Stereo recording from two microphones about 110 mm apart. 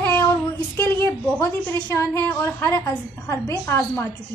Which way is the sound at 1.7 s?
25° left (ahead or behind).